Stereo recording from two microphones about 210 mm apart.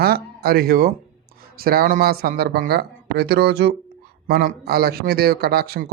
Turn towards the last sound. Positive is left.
turn(degrees=-50)  # may be behind; listen again after turning